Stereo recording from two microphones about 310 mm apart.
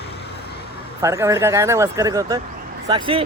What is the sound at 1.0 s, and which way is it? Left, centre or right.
Speech, centre.